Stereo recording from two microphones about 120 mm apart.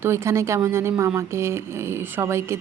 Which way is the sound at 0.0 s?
20° right (ahead or behind).